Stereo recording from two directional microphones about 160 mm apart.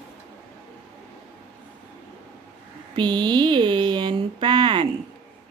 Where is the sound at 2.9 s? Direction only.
25° right (ahead or behind).